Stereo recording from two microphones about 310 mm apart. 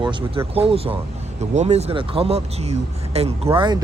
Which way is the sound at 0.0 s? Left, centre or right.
Centre.